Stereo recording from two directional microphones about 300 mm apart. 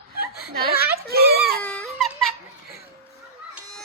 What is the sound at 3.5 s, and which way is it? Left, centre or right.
Children playing, centre.